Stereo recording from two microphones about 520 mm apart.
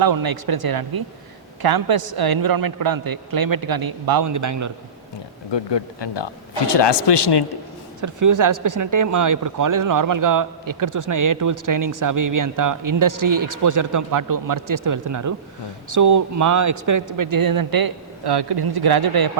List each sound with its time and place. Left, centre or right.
0.0 s speech: right
5.5 s speech: left
8.0 s speech: right